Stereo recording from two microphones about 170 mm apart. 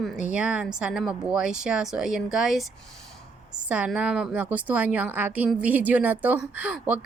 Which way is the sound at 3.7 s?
5° right (ahead or behind).